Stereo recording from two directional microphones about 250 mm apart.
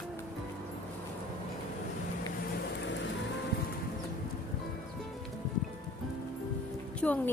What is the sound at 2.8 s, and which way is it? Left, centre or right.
Music, left.